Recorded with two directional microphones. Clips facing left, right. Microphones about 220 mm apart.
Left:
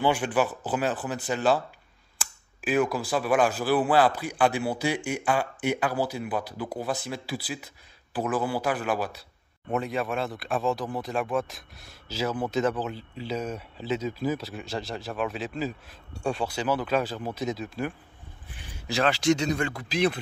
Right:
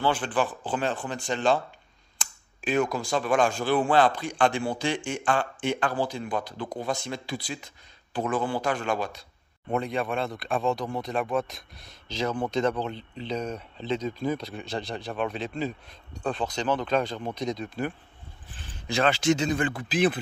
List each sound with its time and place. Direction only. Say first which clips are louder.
0.0 s speech: left 2 dB; 10° left (ahead or behind); by 20.2 s 5° right (ahead or behind)